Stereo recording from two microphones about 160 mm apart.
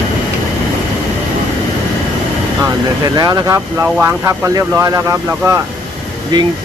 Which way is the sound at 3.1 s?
25° right (ahead or behind).